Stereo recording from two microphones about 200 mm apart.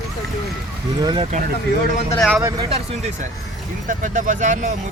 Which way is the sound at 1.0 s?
25° right (ahead or behind).